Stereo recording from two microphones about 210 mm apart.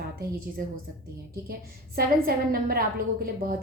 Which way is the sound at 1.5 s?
45° right (ahead or behind).